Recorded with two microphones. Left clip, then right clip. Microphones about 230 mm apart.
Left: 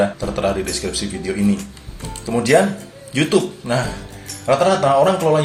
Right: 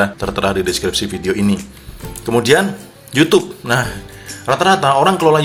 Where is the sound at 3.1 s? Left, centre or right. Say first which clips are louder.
Right 5 dB; right.